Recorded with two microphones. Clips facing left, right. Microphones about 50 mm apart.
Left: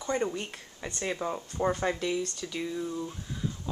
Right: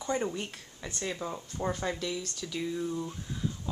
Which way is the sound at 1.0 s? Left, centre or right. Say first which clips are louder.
Left 4 dB; centre.